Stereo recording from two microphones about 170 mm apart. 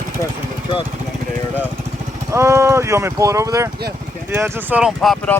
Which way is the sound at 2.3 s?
15° right (ahead or behind).